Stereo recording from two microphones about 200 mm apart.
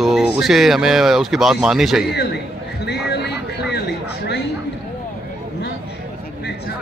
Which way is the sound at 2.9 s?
55° left (ahead or behind).